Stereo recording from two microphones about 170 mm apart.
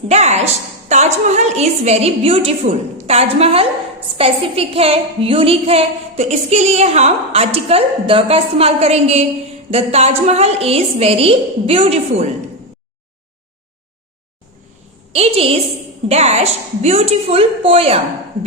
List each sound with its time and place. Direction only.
0.1 s a woman's voice: 40° right (ahead or behind)
15.1 s a woman's voice: 35° right (ahead or behind)